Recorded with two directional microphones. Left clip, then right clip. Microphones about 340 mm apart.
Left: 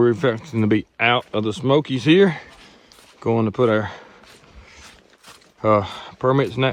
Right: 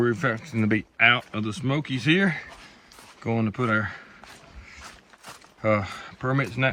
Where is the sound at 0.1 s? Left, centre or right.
Centre.